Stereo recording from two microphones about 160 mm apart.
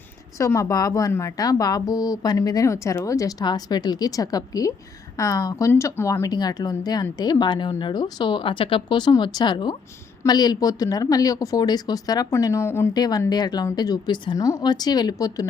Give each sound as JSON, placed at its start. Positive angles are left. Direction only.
{"t": 0.3, "sound": "speech", "side_deg": 20}